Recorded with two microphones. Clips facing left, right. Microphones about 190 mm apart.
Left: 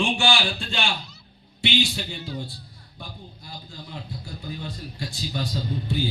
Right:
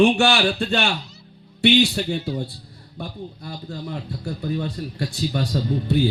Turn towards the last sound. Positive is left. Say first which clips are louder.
# right 7 dB
turn(degrees=-65)  # may be behind; listen again after turning